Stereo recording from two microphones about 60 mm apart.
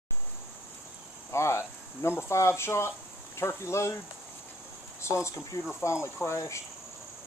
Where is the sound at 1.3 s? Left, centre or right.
Left.